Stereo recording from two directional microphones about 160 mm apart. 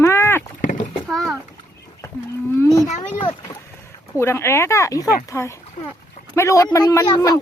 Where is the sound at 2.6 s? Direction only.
20° left (ahead or behind).